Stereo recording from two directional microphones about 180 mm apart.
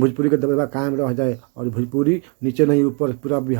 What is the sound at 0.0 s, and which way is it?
Speech, 25° left (ahead or behind).